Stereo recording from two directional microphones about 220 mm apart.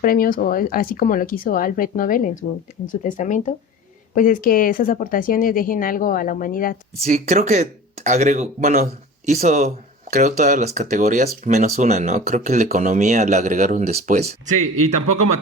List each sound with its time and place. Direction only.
0.0 s speech: 40° left (ahead or behind)
7.0 s speech: 30° right (ahead or behind)